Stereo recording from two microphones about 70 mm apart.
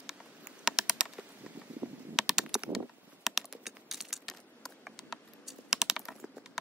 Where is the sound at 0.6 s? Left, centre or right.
Centre.